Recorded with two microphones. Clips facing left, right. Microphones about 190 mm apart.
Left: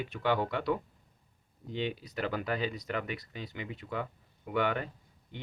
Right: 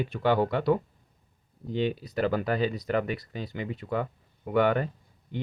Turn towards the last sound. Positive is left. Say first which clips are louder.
# right 7 dB
turn(degrees=-40)  # may be behind; listen again after turning